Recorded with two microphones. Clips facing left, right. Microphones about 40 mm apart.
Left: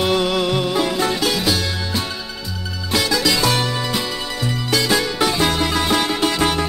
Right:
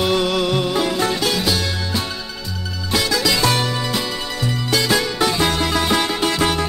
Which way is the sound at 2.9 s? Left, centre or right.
Centre.